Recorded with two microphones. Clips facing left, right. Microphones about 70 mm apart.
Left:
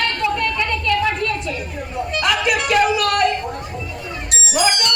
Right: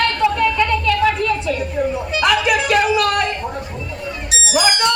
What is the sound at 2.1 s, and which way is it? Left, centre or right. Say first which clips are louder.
Music: right 2 dB; centre.